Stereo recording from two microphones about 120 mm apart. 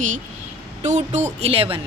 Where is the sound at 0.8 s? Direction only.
75° right (ahead or behind).